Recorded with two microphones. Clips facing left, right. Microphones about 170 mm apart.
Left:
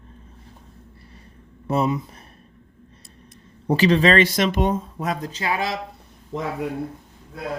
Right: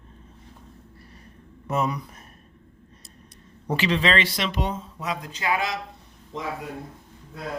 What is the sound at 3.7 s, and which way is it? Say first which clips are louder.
Speech: left 6 dB; 40° left (ahead or behind).